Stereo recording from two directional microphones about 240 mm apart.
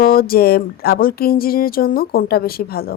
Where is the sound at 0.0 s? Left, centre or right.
Left.